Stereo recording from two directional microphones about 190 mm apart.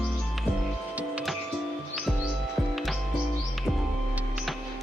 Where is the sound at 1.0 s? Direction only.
5° right (ahead or behind).